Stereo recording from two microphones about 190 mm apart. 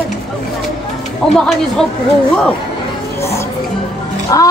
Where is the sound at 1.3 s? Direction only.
Centre (ahead or behind).